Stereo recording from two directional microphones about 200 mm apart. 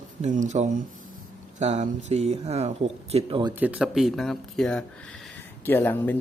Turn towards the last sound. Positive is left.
turn(degrees=10)  # may be behind; listen again after turning